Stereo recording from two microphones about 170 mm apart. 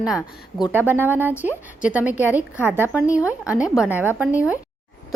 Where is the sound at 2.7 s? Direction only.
15° left (ahead or behind).